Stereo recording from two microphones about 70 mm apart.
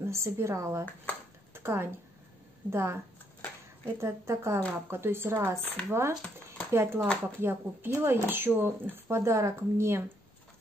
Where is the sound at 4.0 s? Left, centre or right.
Right.